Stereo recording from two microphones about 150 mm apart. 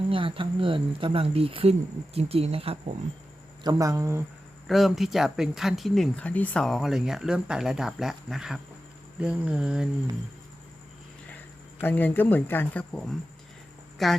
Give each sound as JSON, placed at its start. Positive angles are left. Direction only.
{"t": 0.1, "sound": "speech", "side_deg": -35}
{"t": 3.6, "sound": "speech", "side_deg": -25}
{"t": 4.6, "sound": "speech", "side_deg": 0}
{"t": 11.8, "sound": "speech", "side_deg": 15}